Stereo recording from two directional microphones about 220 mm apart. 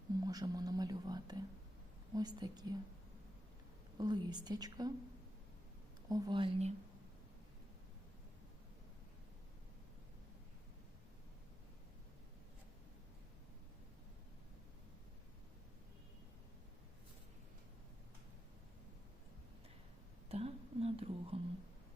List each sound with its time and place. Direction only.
0.3 s speech: 15° right (ahead or behind)
3.9 s speech: 20° right (ahead or behind)
6.1 s speech: 20° right (ahead or behind)
20.3 s whispering: 25° right (ahead or behind)